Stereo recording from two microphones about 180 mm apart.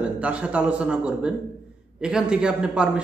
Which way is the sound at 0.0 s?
5° right (ahead or behind).